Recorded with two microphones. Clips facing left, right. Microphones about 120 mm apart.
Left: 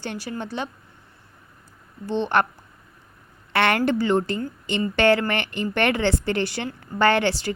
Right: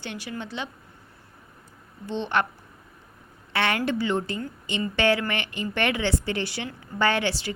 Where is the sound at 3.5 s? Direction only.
60° left (ahead or behind).